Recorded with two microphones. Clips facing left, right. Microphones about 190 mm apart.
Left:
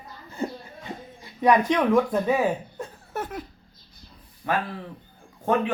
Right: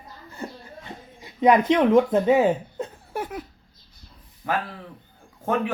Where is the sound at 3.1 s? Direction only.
10° right (ahead or behind).